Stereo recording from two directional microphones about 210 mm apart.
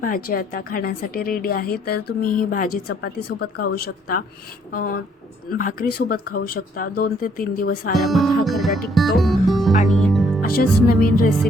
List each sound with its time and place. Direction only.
0.0 s a woman's voice: 45° left (ahead or behind)
8.0 s speech: centre (ahead or behind)
9.9 s music: centre (ahead or behind)
10.4 s a woman's voice: 45° left (ahead or behind)